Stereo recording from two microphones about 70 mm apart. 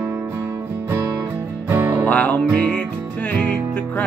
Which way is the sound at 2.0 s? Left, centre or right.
Left.